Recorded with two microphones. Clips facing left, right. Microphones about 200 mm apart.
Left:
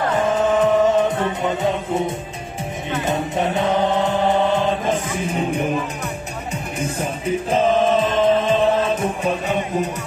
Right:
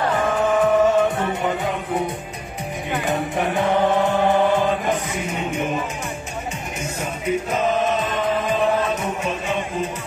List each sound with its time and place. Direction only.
0.3 s music: 20° left (ahead or behind)
3.1 s music: 20° left (ahead or behind)
6.8 s music: 30° left (ahead or behind)